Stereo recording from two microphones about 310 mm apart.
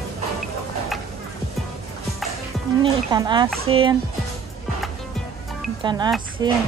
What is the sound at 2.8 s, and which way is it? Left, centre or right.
Speech, centre.